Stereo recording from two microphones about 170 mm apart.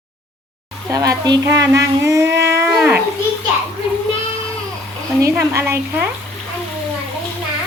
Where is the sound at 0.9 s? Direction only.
20° right (ahead or behind).